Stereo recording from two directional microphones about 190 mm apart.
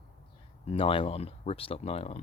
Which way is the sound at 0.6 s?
30° left (ahead or behind).